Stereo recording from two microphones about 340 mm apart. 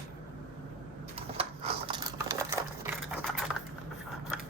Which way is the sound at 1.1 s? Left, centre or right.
Centre.